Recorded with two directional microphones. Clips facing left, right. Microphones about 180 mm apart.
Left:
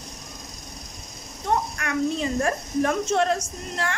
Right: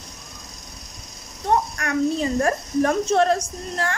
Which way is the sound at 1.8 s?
40° right (ahead or behind).